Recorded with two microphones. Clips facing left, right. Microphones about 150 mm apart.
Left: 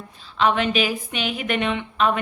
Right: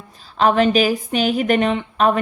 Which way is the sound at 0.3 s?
40° right (ahead or behind).